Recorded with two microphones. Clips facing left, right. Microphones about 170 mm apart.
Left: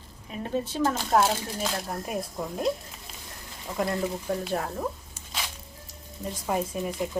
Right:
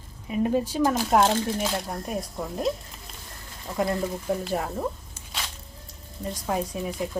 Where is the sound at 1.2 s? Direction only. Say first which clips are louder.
Right 4 dB; centre (ahead or behind).